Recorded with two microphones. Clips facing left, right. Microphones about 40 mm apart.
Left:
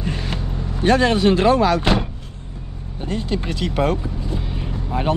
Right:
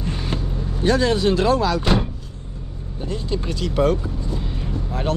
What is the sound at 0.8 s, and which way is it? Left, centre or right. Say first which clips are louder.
Speech: left 3 dB; left.